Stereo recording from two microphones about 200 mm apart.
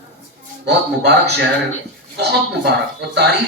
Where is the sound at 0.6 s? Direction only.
55° right (ahead or behind).